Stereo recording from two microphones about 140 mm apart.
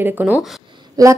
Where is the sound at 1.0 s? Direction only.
25° right (ahead or behind).